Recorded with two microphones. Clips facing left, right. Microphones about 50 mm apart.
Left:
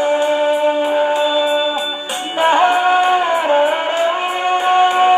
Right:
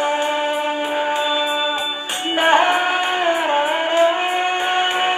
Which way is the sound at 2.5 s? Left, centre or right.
Right.